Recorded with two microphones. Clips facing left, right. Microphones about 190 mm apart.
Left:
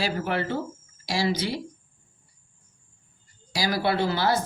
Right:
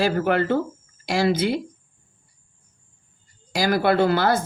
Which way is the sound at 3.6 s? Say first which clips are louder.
Right 6 dB; 50° right (ahead or behind).